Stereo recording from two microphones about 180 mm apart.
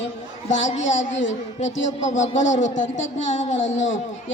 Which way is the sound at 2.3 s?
90° left.